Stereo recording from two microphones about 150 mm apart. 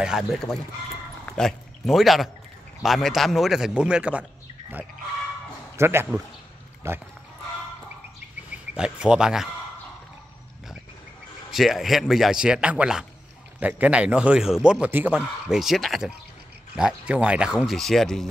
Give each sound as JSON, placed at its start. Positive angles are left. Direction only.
{"t": 0.0, "sound": "speech", "side_deg": 0}
{"t": 5.8, "sound": "a man's voice", "side_deg": -15}
{"t": 8.5, "sound": "speech", "side_deg": -5}
{"t": 11.5, "sound": "a man's voice", "side_deg": 0}